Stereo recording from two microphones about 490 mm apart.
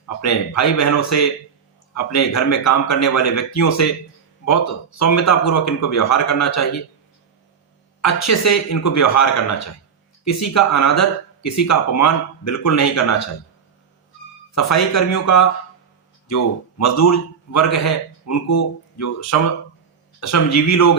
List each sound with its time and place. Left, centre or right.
0.2 s a man's voice: left
8.0 s a man's voice: left
14.5 s a man's voice: left